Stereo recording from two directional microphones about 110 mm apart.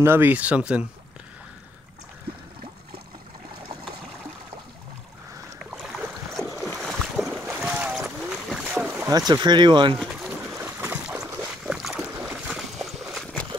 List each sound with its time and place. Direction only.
0.0 s speech: 20° right (ahead or behind)
5.7 s boat: 5° right (ahead or behind)
7.4 s splash: 15° right (ahead or behind)
8.0 s boat: 5° right (ahead or behind)
9.3 s speech: 40° right (ahead or behind)
10.5 s boat: 20° right (ahead or behind)
11.1 s boat: 5° right (ahead or behind)
12.3 s a sound: 5° right (ahead or behind)